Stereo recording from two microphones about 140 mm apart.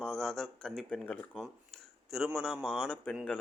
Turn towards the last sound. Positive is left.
turn(degrees=10)  # may be behind; listen again after turning